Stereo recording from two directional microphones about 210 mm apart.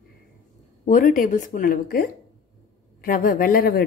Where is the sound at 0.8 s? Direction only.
40° left (ahead or behind).